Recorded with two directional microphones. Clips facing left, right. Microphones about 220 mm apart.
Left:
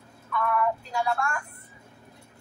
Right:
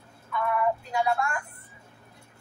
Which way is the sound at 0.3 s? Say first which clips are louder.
Even; 20° right (ahead or behind).